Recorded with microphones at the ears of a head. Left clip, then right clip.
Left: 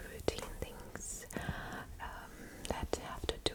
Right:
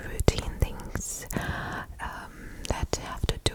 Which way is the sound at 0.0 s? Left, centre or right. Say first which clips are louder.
Right 10 dB; right.